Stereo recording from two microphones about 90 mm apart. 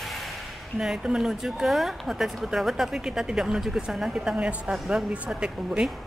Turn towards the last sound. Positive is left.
turn(degrees=-10)  # may be behind; listen again after turning